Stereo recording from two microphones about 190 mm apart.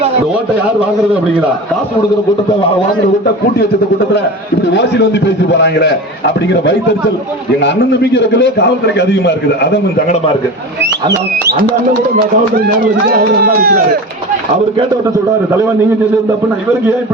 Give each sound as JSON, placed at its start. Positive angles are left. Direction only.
{"t": 4.7, "sound": "a man's voice", "side_deg": 65}
{"t": 13.1, "sound": "speech", "side_deg": -55}